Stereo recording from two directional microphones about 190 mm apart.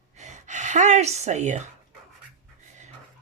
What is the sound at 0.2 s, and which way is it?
Speech, 40° right (ahead or behind).